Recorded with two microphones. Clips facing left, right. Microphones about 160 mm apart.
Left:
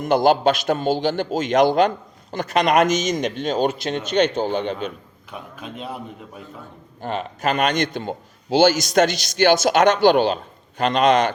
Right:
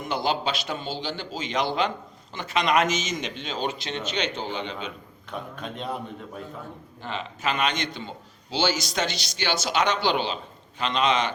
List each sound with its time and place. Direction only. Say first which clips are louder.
0.0 s a man's voice: left 10 dB; 45° left (ahead or behind)
5.3 s a man's voice: even; 5° left (ahead or behind)
7.0 s a man's voice: left 6 dB; 45° left (ahead or behind)